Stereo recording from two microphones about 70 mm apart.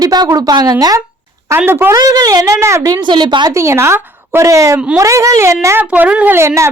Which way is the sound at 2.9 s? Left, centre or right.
Right.